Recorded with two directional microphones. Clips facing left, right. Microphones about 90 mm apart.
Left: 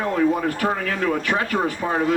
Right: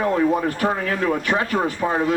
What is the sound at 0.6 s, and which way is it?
Speech, 30° right (ahead or behind).